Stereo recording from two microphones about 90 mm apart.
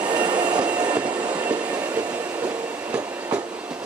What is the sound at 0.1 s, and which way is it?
Train, 55° right (ahead or behind).